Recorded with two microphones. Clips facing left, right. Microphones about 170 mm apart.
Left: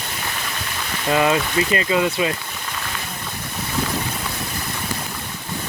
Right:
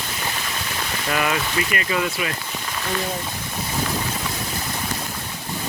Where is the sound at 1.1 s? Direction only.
25° left (ahead or behind).